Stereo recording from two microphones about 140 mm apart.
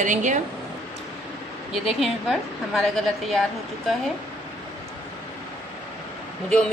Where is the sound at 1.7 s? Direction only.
Centre (ahead or behind).